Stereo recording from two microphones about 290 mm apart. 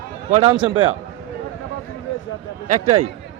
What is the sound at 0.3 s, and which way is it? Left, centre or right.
Speech, right.